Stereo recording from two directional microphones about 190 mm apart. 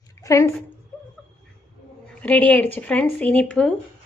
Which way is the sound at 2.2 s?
10° left (ahead or behind).